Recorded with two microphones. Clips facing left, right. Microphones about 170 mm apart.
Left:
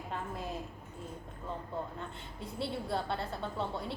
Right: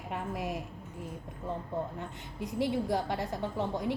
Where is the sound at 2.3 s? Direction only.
15° right (ahead or behind).